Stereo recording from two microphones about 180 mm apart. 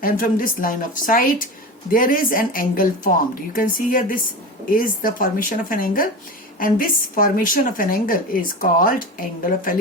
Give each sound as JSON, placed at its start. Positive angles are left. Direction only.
{"t": 0.0, "sound": "a woman's voice", "side_deg": 50}